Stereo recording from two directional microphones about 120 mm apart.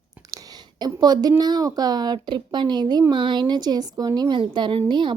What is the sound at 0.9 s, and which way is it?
A woman's voice, 30° right (ahead or behind).